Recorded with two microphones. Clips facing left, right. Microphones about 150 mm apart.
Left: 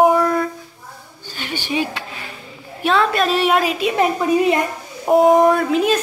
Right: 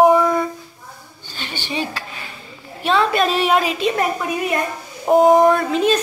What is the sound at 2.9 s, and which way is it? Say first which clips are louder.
A woman's voice: even; centre (ahead or behind).